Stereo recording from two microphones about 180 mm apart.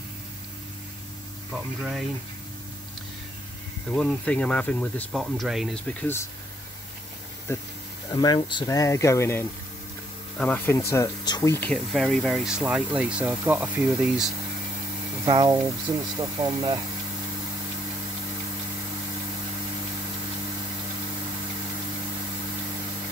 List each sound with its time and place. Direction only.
1.8 s speech: 5° right (ahead or behind)
3.9 s speech: 5° left (ahead or behind)
7.5 s speech: 15° left (ahead or behind)
11.7 s speech: centre (ahead or behind)
15.2 s speech: 25° right (ahead or behind)